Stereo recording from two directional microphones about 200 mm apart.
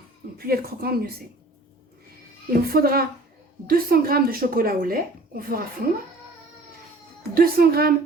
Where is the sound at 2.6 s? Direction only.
50° right (ahead or behind).